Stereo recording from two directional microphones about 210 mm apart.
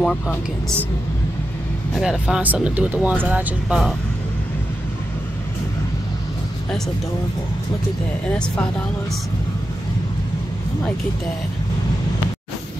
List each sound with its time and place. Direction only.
0.0 s speech: 5° left (ahead or behind)
2.0 s speech: 5° right (ahead or behind)
8.3 s speech: 5° left (ahead or behind)